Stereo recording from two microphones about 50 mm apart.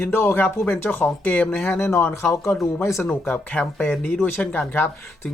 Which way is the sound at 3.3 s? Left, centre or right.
Left.